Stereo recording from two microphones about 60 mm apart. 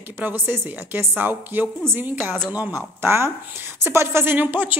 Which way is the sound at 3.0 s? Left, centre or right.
Right.